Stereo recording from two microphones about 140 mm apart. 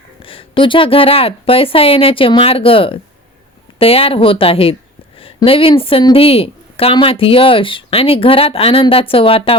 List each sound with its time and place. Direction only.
0.2 s a woman's voice: 40° left (ahead or behind)